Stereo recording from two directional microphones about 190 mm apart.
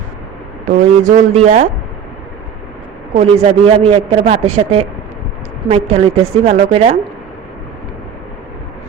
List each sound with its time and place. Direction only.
0.6 s a man's voice: 40° right (ahead or behind)
3.2 s a man's voice: 30° right (ahead or behind)